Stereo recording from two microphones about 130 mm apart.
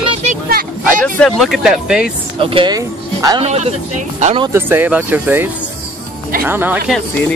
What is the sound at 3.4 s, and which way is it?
Speech, 55° right (ahead or behind).